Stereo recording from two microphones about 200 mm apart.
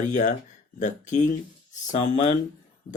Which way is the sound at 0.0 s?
35° left (ahead or behind).